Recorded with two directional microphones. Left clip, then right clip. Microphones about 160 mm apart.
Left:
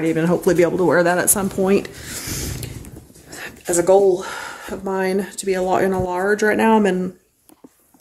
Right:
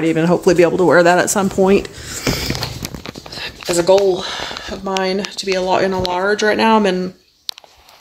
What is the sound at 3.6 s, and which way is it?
Speech, 5° right (ahead or behind).